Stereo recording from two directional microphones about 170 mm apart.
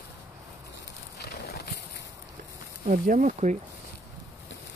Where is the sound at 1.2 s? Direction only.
70° left (ahead or behind).